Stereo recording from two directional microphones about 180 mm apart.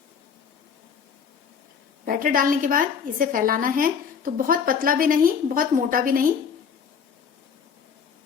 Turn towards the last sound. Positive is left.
turn(degrees=-50)  # may be behind; listen again after turning